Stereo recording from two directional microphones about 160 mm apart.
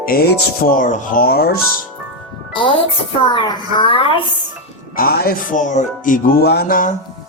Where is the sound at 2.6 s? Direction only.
30° left (ahead or behind).